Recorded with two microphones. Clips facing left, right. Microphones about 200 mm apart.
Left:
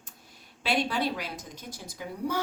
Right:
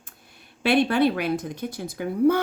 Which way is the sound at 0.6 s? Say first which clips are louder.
Right 9 dB; 60° right (ahead or behind).